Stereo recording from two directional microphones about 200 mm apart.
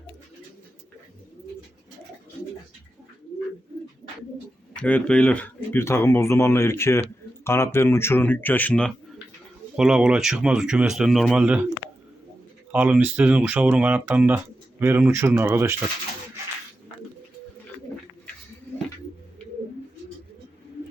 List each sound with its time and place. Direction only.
4.8 s speech: 5° left (ahead or behind)
12.7 s speech: 10° right (ahead or behind)